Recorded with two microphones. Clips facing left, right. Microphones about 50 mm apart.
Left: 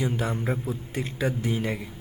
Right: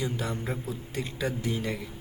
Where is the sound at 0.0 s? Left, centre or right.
Left.